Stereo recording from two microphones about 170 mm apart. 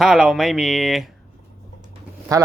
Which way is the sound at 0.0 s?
Centre (ahead or behind).